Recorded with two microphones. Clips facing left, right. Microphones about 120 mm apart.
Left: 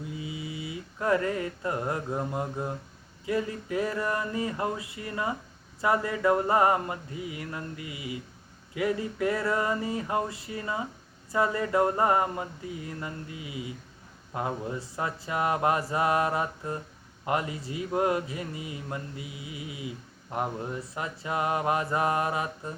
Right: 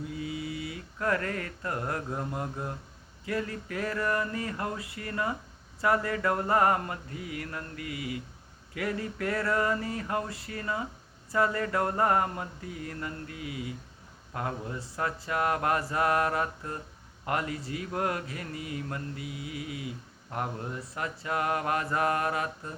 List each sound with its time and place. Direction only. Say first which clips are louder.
0.2 s mantra: right 2 dB; 20° left (ahead or behind)
3.2 s speech: left 3 dB; 15° left (ahead or behind)